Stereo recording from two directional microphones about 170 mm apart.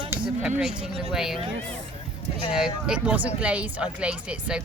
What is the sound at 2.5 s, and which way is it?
Speech, 5° right (ahead or behind).